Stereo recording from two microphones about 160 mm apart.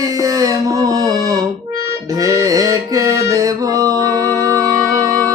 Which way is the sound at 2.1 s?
20° right (ahead or behind).